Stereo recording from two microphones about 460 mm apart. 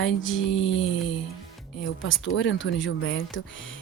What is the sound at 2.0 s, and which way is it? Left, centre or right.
Speech, left.